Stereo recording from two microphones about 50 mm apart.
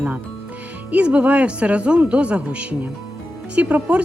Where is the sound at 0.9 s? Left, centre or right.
Right.